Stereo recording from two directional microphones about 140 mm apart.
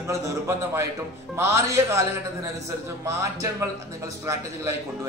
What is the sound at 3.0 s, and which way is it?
Speech, 20° right (ahead or behind).